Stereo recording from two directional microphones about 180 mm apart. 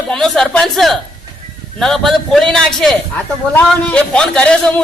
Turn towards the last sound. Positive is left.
turn(degrees=5)  # may be behind; listen again after turning